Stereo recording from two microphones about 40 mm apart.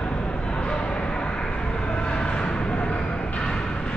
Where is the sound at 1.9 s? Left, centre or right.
Left.